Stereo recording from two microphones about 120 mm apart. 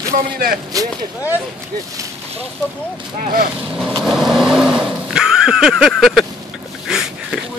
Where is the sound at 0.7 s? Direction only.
30° right (ahead or behind).